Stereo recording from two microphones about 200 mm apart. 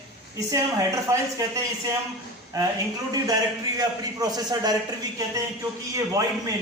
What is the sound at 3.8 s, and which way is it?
Speech, 20° right (ahead or behind).